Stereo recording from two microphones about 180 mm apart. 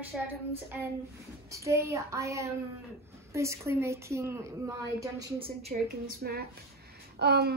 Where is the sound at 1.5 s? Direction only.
15° right (ahead or behind).